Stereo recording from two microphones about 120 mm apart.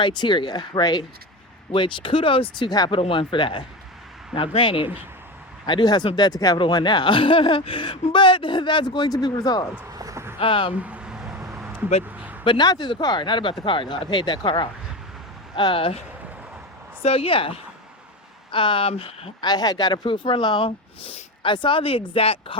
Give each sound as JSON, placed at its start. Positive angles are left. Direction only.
{"t": 0.0, "sound": "speech", "side_deg": 40}
{"t": 3.0, "sound": "speech", "side_deg": 45}
{"t": 9.9, "sound": "a sound", "side_deg": -30}
{"t": 10.4, "sound": "speech", "side_deg": 50}
{"t": 10.8, "sound": "a sound", "side_deg": -10}
{"t": 11.3, "sound": "vehicle", "side_deg": -25}
{"t": 12.1, "sound": "a sound", "side_deg": -15}
{"t": 12.5, "sound": "speech", "side_deg": 35}
{"t": 17.0, "sound": "speech", "side_deg": 55}
{"t": 19.4, "sound": "speech", "side_deg": 35}